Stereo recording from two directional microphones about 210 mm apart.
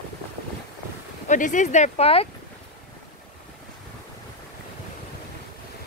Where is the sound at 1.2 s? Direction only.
35° left (ahead or behind).